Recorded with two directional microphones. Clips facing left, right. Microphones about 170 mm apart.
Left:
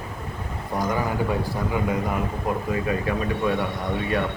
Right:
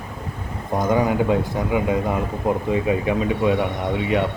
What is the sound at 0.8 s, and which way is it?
A man's voice, 20° right (ahead or behind).